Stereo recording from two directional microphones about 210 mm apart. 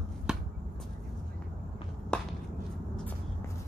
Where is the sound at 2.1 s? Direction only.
5° left (ahead or behind).